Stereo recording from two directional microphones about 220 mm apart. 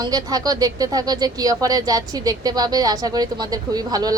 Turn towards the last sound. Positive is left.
turn(degrees=-15)  # may be behind; listen again after turning